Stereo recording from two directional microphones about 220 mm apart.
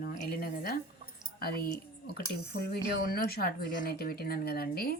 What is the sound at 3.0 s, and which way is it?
Speech, 45° left (ahead or behind).